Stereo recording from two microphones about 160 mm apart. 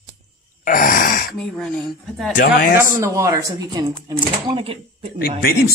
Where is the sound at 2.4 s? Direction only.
60° left (ahead or behind).